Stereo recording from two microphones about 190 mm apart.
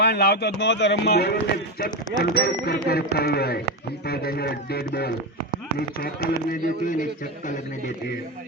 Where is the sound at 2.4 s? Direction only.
55° left (ahead or behind).